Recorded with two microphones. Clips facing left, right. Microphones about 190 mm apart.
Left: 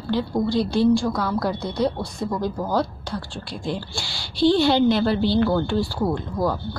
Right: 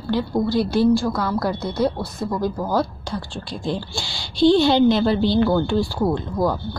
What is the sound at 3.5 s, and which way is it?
A woman's voice, 20° right (ahead or behind).